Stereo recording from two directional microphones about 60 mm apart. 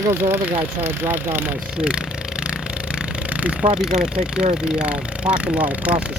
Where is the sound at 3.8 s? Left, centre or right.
Centre.